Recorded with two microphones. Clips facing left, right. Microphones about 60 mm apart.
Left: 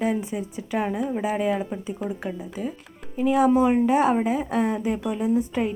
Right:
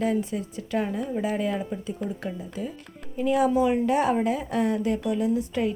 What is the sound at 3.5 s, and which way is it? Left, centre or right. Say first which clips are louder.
Speech: left 3 dB; left.